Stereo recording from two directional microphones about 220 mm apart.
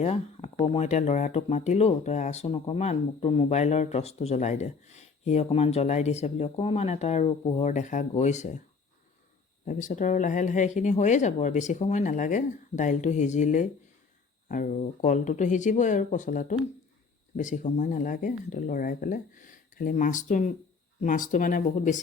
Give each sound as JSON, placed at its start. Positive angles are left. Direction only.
{"t": 0.0, "sound": "speech", "side_deg": 30}
{"t": 9.6, "sound": "speech", "side_deg": 35}